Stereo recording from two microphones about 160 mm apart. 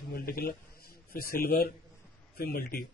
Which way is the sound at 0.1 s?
65° left (ahead or behind).